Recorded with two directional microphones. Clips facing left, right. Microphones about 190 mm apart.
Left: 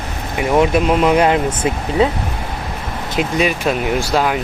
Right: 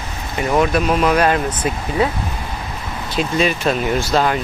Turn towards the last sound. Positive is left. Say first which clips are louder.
# even
turn(degrees=10)  # may be behind; listen again after turning